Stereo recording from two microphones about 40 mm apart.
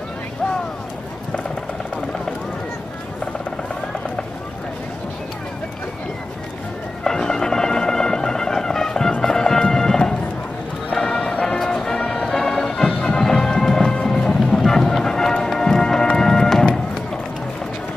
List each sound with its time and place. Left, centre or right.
7.1 s music: centre
10.9 s music: left